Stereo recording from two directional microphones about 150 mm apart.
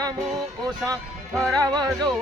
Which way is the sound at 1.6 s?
25° right (ahead or behind).